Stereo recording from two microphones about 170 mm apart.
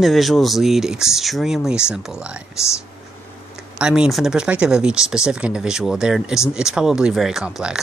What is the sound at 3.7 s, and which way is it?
Speech, 5° right (ahead or behind).